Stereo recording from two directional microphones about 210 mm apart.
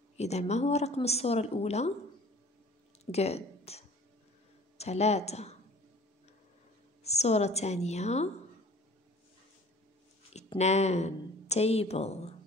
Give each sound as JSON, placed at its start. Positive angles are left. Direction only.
{"t": 0.2, "sound": "a woman's voice", "side_deg": 30}
{"t": 3.1, "sound": "a woman's voice", "side_deg": 30}
{"t": 7.0, "sound": "a woman's voice", "side_deg": 30}
{"t": 10.3, "sound": "a woman's voice", "side_deg": 30}